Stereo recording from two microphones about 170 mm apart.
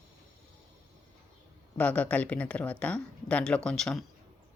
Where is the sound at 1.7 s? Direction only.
10° left (ahead or behind).